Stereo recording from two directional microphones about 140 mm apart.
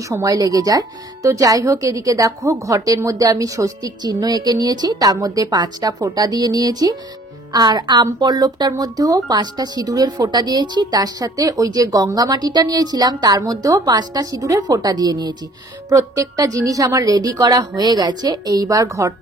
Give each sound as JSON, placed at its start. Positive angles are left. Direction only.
{"t": 0.1, "sound": "speech", "side_deg": -25}